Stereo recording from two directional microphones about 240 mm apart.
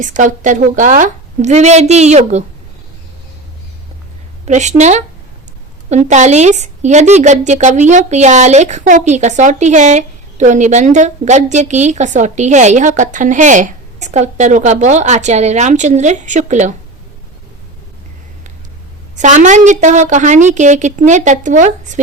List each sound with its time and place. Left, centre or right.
0.0 s a woman's voice: right
4.4 s a woman's voice: right
19.1 s a woman's voice: right